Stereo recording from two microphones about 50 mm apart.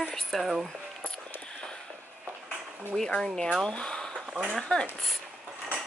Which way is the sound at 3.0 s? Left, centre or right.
Centre.